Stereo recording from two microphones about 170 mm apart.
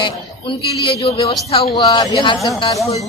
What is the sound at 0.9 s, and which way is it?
Speech, 30° left (ahead or behind).